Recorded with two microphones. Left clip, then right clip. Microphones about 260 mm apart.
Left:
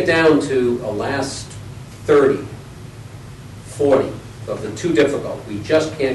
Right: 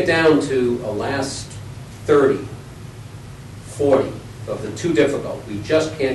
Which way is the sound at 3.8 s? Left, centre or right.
Left.